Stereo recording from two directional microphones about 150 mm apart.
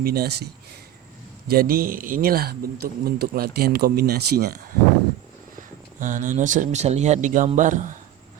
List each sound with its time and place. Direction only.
0.0 s a man's voice: 90° right
1.5 s a man's voice: 80° right
6.0 s a man's voice: 60° right (ahead or behind)